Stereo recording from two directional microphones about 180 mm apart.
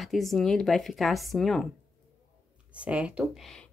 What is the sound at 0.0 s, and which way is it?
A woman's voice, centre (ahead or behind).